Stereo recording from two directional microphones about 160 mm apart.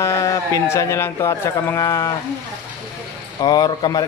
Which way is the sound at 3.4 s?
25° left (ahead or behind).